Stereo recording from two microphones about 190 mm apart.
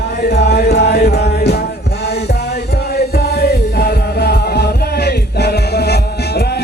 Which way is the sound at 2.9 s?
55° left (ahead or behind).